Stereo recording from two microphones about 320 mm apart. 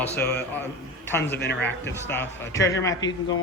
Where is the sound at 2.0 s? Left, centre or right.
Centre.